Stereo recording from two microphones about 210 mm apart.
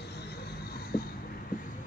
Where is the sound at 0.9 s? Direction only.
45° left (ahead or behind).